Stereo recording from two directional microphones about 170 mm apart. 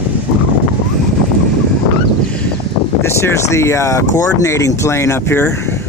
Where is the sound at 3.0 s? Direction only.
15° left (ahead or behind).